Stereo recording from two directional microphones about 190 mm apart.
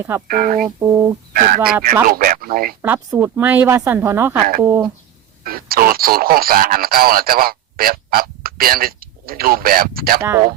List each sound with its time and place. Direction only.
0.3 s speech: 45° right (ahead or behind)
0.8 s speech: 15° right (ahead or behind)
1.3 s speech: 45° right (ahead or behind)
2.8 s speech: 10° right (ahead or behind)
5.4 s speech: 50° right (ahead or behind)
10.2 s speech: 15° right (ahead or behind)